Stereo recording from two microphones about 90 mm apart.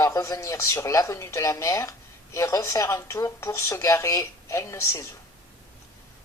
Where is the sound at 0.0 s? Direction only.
40° left (ahead or behind).